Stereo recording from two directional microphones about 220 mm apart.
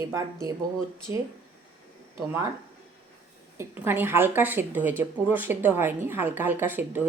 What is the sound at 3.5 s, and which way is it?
Speech, 10° right (ahead or behind).